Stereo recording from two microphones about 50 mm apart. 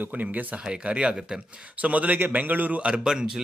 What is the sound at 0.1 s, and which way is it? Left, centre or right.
Speech, right.